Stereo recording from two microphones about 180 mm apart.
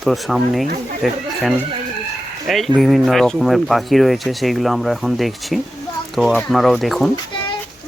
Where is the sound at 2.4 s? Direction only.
Centre (ahead or behind).